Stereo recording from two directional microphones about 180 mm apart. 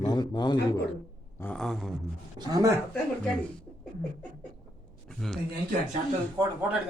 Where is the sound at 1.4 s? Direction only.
5° left (ahead or behind).